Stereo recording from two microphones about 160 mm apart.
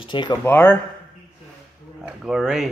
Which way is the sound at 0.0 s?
30° left (ahead or behind).